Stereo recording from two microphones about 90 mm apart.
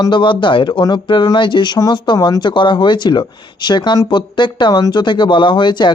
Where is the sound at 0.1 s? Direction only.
65° left (ahead or behind).